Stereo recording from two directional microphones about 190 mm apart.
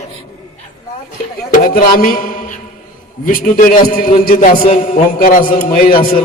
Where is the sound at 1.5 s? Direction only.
50° left (ahead or behind).